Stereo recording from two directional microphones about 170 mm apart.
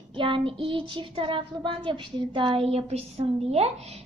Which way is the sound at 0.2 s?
30° right (ahead or behind).